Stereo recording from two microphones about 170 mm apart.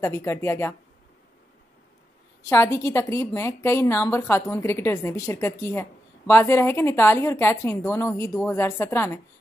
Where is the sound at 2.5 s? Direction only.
15° left (ahead or behind).